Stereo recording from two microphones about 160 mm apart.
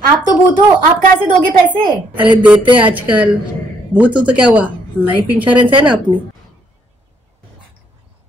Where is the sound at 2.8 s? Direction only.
10° right (ahead or behind).